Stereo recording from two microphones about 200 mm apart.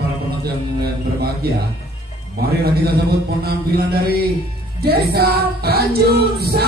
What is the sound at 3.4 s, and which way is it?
Music, 50° right (ahead or behind).